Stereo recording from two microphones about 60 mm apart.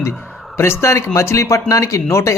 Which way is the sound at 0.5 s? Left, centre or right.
Left.